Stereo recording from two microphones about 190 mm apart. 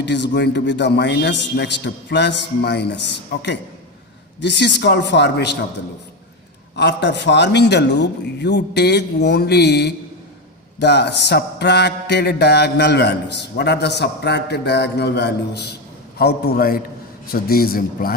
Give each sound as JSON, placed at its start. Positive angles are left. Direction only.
{"t": 0.0, "sound": "mantra", "side_deg": 65}
{"t": 4.4, "sound": "mantra", "side_deg": 65}
{"t": 6.7, "sound": "mantra", "side_deg": 65}
{"t": 17.3, "sound": "a man's voice", "side_deg": 50}